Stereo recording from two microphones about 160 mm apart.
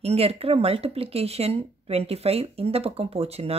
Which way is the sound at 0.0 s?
40° right (ahead or behind).